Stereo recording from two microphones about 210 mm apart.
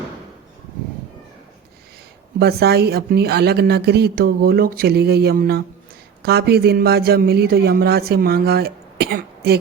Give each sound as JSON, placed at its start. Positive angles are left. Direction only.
{"t": 2.4, "sound": "a man's voice", "side_deg": -50}